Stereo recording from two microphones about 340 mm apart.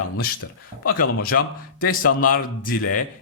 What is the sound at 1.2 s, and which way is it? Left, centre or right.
Speech, left.